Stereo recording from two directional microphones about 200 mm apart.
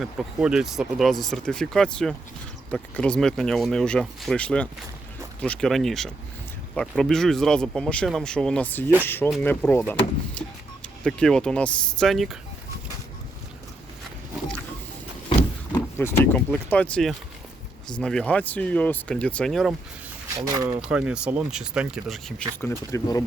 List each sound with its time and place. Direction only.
0.0 s speech: centre (ahead or behind)
16.0 s speech: 10° left (ahead or behind)
20.5 s speech: 15° right (ahead or behind)
22.6 s speech: 15° left (ahead or behind)